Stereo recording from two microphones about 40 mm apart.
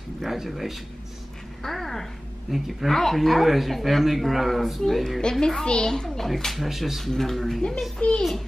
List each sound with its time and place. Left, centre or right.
0.5 s a child's voice: centre
2.5 s speech: centre
2.9 s a child's voice: centre
8.0 s a child's voice: left